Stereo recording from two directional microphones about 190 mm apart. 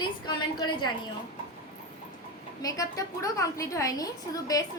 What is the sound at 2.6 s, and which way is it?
A woman's voice, 20° left (ahead or behind).